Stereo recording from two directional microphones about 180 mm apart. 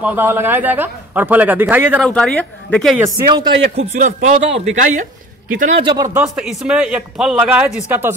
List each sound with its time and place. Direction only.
0.0 s speech: 10° right (ahead or behind)
2.0 s speech: 5° left (ahead or behind)
3.7 s a man's voice: 45° right (ahead or behind)
5.8 s speech: 25° right (ahead or behind)
6.3 s speech: centre (ahead or behind)